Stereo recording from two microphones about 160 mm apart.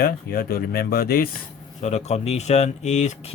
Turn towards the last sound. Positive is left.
turn(degrees=45)  # may be behind; listen again after turning